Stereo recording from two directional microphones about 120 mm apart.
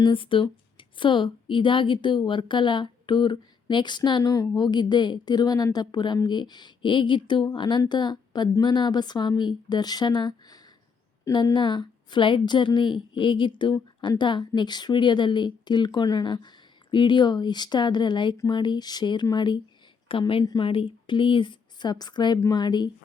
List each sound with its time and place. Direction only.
0.0 s a woman's voice: 45° left (ahead or behind)
20.4 s speech: 35° left (ahead or behind)
20.7 s speech: 45° left (ahead or behind)